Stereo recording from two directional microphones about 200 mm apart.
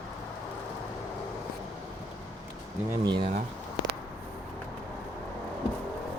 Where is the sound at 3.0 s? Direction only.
20° right (ahead or behind).